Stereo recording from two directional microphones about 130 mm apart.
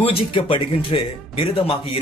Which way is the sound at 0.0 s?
45° left (ahead or behind).